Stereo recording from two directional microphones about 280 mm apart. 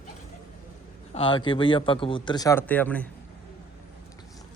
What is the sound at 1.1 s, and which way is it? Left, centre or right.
Speech, centre.